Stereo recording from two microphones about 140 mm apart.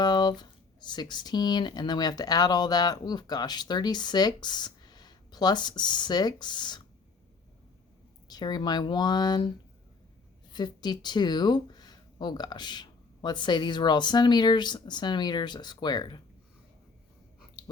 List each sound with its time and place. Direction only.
0.0 s speech: 30° left (ahead or behind)
8.3 s speech: 30° left (ahead or behind)
10.5 s speech: 30° left (ahead or behind)